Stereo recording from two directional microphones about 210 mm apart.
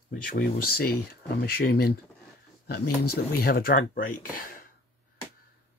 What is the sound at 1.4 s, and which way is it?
Speech, 45° left (ahead or behind).